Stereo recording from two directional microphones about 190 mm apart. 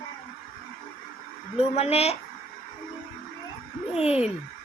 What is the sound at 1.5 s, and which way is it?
Speech, 35° left (ahead or behind).